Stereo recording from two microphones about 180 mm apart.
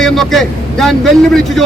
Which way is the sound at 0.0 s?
Centre (ahead or behind).